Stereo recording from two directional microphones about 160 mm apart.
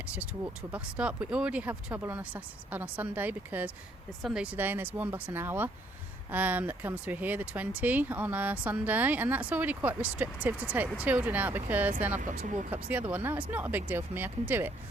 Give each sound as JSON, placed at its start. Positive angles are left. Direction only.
{"t": 0.7, "sound": "speech", "side_deg": -5}
{"t": 12.2, "sound": "speech", "side_deg": -55}
{"t": 12.7, "sound": "speech", "side_deg": -10}